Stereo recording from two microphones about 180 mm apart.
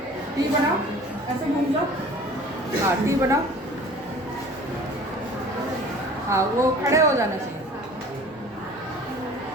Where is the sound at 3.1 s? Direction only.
15° right (ahead or behind).